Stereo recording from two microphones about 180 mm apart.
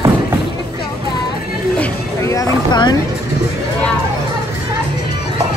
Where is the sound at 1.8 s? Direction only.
15° left (ahead or behind).